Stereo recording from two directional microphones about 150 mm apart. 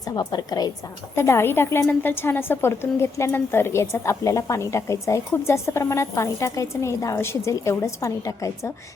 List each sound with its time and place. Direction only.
0.0 s a woman's voice: 25° left (ahead or behind)